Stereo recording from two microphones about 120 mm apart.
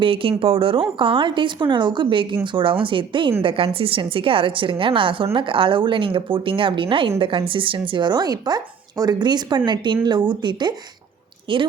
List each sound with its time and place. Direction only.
0.0 s speech: 50° right (ahead or behind)